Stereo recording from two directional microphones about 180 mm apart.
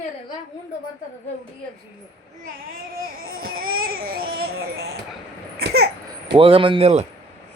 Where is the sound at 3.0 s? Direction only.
55° right (ahead or behind).